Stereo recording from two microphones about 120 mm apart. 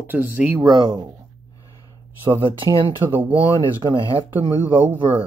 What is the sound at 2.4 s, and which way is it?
Speech, 45° right (ahead or behind).